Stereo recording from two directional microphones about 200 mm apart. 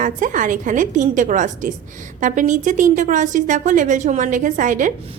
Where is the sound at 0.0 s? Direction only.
40° right (ahead or behind).